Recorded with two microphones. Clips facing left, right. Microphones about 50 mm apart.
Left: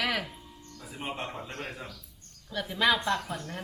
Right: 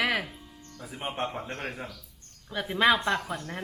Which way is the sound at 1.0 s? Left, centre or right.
Right.